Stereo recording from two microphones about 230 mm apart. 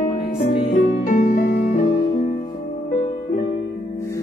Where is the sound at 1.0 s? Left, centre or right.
Left.